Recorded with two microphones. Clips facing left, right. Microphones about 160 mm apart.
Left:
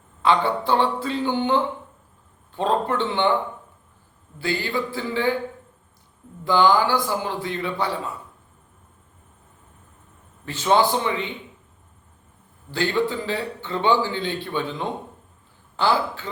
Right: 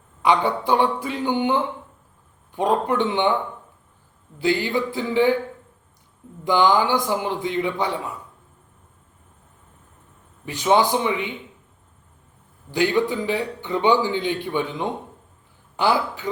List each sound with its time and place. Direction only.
0.2 s a man's voice: 15° right (ahead or behind)
4.4 s a man's voice: 15° right (ahead or behind)
6.4 s a man's voice: 20° right (ahead or behind)
10.4 s a man's voice: 15° right (ahead or behind)
12.7 s a man's voice: 15° right (ahead or behind)